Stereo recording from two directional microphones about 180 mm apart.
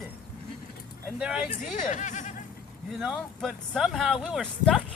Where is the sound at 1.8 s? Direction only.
45° left (ahead or behind).